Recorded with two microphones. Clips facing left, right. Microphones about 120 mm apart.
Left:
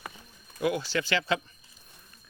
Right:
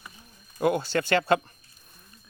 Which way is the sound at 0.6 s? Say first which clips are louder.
Right 4 dB; 50° right (ahead or behind).